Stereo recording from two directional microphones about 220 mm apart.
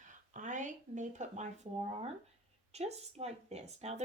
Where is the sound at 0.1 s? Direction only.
35° right (ahead or behind).